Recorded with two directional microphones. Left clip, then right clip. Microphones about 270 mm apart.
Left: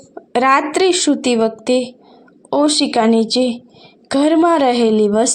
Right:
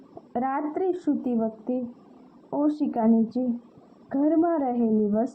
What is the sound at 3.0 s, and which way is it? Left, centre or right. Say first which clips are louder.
A woman's voice: left 12 dB; left.